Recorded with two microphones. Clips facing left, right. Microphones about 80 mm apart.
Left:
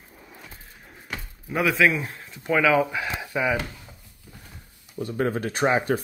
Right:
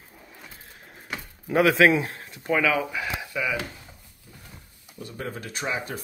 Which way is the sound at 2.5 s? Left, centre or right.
Centre.